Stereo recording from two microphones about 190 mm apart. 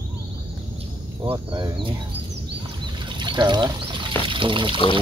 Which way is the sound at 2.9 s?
25° right (ahead or behind).